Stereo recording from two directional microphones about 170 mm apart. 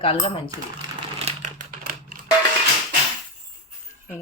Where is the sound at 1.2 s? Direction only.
45° right (ahead or behind).